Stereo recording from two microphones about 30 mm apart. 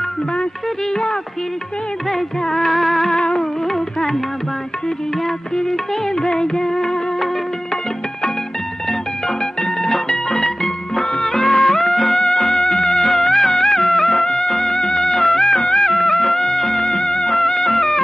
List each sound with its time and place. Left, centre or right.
2.4 s music: centre
2.7 s music: centre
5.2 s music: centre
9.4 s music: left
14.2 s music: left
17.3 s music: centre